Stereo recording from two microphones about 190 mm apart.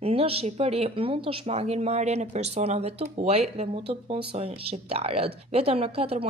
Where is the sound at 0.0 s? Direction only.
30° right (ahead or behind).